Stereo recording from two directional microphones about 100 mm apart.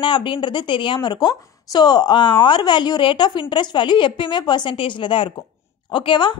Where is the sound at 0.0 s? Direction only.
55° left (ahead or behind).